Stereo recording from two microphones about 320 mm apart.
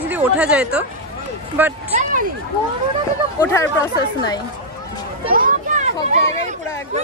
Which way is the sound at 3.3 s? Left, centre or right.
Centre.